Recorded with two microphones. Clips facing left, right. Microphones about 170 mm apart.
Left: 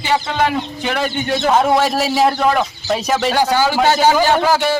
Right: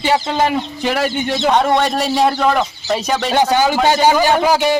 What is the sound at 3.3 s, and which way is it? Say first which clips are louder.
A man's voice: right 4 dB; 20° right (ahead or behind).